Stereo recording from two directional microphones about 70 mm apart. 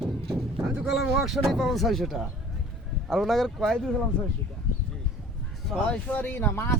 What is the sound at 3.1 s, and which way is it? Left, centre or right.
Speech, centre.